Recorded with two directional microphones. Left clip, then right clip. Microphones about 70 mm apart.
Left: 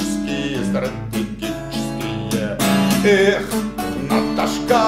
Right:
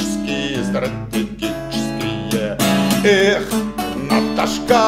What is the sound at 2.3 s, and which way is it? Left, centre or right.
Music, right.